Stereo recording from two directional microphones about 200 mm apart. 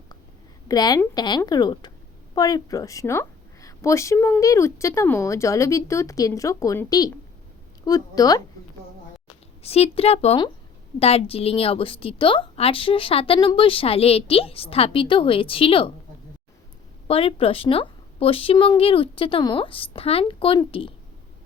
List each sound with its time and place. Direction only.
0.7 s a woman's voice: 20° left (ahead or behind)
9.6 s a woman's voice: 30° left (ahead or behind)
17.1 s a woman's voice: 30° left (ahead or behind)